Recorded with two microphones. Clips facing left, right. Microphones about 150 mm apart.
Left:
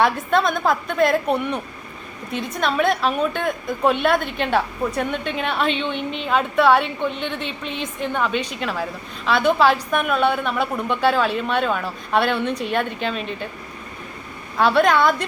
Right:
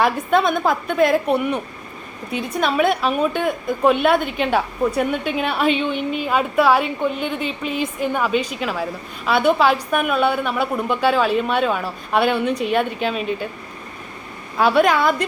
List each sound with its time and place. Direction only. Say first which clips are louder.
0.0 s a woman's voice: right 1 dB; 5° right (ahead or behind)
14.6 s a woman's voice: right 1 dB; 5° right (ahead or behind)